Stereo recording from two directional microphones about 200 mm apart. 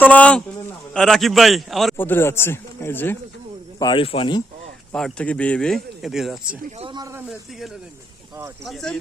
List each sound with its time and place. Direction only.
0.0 s a man's voice: 5° left (ahead or behind)
3.8 s speech: 25° left (ahead or behind)
4.9 s speech: 5° left (ahead or behind)
6.7 s speech: 25° right (ahead or behind)
8.6 s speech: centre (ahead or behind)